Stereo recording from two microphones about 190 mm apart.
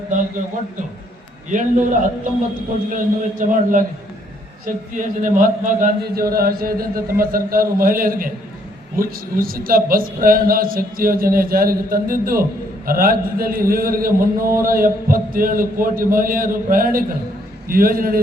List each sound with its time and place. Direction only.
1.5 s a man's voice: 40° right (ahead or behind)